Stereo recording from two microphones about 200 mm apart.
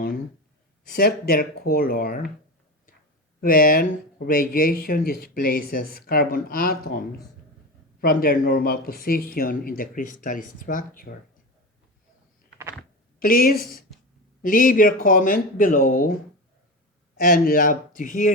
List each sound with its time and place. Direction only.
0.9 s speech: 45° left (ahead or behind)
3.4 s speech: 45° left (ahead or behind)
8.0 s speech: 45° left (ahead or behind)
13.1 s speech: 45° left (ahead or behind)
17.2 s speech: 45° left (ahead or behind)